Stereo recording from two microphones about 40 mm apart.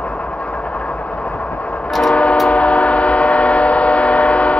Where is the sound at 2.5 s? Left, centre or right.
Left.